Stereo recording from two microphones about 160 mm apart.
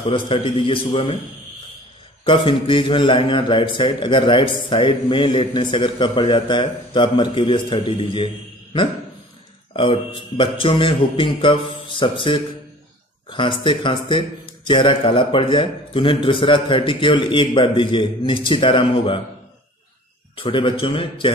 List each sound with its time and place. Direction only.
0.0 s a man's voice: 35° left (ahead or behind)
2.2 s a man's voice: 30° left (ahead or behind)
9.8 s a man's voice: 35° left (ahead or behind)
20.3 s a man's voice: 35° left (ahead or behind)